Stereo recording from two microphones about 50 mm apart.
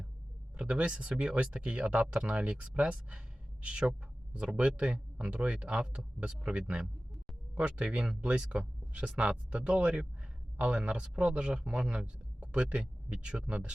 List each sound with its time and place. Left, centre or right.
0.5 s a man's voice: right